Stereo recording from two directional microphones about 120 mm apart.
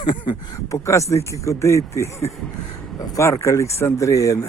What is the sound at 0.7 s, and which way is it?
Speech, 25° left (ahead or behind).